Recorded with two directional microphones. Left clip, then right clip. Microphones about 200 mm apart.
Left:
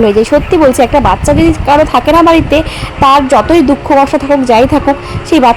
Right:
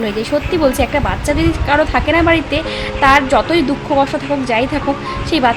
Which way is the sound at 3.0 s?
35° left (ahead or behind).